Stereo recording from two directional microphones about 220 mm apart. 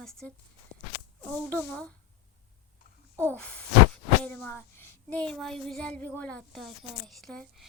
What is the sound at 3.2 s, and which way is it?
Speech, 5° left (ahead or behind).